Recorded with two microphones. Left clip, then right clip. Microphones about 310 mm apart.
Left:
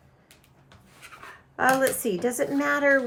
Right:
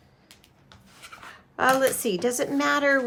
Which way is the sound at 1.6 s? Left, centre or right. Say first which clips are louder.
Right 1 dB; centre.